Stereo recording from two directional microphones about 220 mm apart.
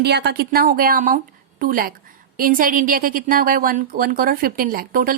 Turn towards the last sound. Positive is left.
turn(degrees=-40)  # may be behind; listen again after turning